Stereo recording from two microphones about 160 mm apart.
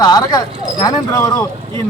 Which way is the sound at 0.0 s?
25° left (ahead or behind).